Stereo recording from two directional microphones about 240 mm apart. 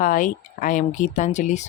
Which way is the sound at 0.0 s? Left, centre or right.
Left.